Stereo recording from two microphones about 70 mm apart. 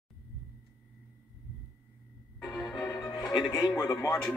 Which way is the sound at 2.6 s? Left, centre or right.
Centre.